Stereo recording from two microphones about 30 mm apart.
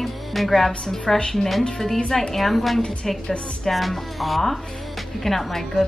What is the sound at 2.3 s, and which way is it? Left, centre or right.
A woman's voice, centre.